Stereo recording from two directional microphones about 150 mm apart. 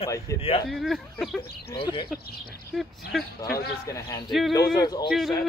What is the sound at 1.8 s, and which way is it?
Speech, 30° left (ahead or behind).